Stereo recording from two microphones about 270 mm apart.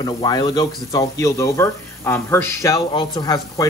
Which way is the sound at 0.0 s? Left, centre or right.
Centre.